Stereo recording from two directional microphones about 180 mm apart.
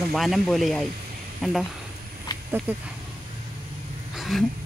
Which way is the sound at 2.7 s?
10° right (ahead or behind).